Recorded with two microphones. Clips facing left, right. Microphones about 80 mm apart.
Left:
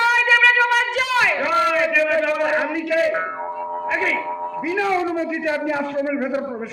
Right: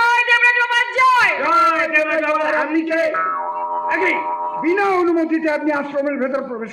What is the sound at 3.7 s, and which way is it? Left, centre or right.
A man's voice, right.